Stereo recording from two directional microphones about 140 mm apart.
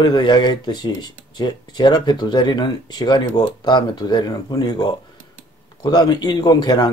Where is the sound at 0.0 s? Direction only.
30° left (ahead or behind).